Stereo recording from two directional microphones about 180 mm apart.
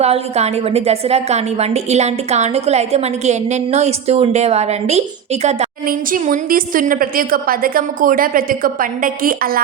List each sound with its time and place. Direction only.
0.0 s a woman's voice: 35° right (ahead or behind)
5.8 s a woman's voice: 50° right (ahead or behind)